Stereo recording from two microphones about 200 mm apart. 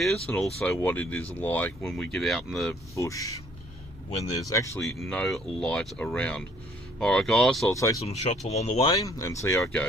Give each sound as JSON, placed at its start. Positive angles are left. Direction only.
{"t": 0.0, "sound": "speech", "side_deg": 5}
{"t": 2.9, "sound": "speech", "side_deg": 15}
{"t": 4.9, "sound": "speech", "side_deg": 0}
{"t": 7.7, "sound": "speech", "side_deg": 15}
{"t": 8.0, "sound": "speech", "side_deg": 30}